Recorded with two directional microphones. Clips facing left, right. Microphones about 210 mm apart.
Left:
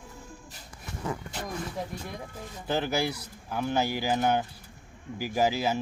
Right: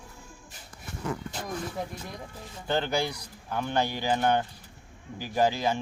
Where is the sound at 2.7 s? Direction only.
5° left (ahead or behind).